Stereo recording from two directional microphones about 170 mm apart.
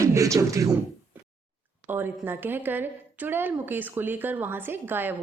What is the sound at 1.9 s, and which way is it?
A woman's voice, 10° right (ahead or behind).